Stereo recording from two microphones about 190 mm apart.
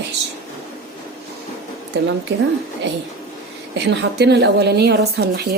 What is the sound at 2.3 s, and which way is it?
Speech, 65° right (ahead or behind).